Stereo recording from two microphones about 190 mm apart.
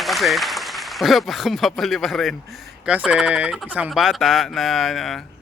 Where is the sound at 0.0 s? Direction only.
Centre (ahead or behind).